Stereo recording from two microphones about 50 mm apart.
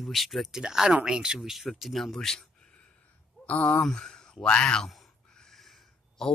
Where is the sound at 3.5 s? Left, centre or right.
Left.